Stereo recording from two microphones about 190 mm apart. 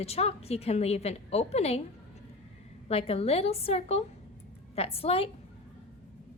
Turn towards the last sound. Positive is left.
turn(degrees=30)  # may be behind; listen again after turning